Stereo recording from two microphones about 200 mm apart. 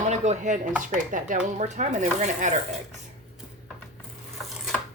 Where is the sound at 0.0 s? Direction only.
35° right (ahead or behind).